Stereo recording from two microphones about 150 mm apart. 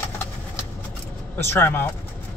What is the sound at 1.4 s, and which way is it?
Speech, 15° left (ahead or behind).